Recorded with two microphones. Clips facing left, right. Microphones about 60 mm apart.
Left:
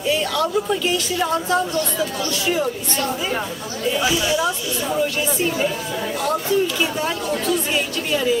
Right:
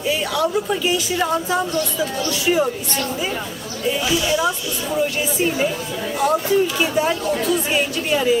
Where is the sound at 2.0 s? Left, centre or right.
Centre.